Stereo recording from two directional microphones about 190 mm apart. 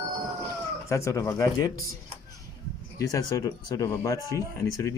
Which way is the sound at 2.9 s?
15° left (ahead or behind).